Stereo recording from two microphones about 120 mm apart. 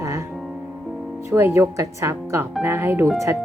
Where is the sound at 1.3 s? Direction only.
20° right (ahead or behind).